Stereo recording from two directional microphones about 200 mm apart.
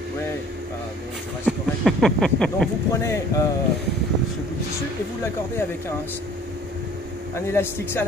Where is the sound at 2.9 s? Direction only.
15° left (ahead or behind).